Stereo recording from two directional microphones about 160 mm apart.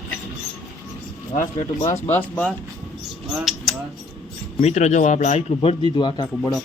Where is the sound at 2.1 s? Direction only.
10° left (ahead or behind).